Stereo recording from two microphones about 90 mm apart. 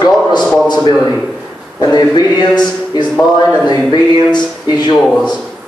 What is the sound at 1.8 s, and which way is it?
A man's voice, 55° left (ahead or behind).